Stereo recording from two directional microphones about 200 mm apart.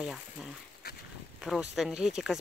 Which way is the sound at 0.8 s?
55° left (ahead or behind).